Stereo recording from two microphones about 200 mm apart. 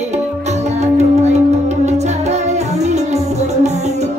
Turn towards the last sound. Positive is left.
turn(degrees=-35)  # may be behind; listen again after turning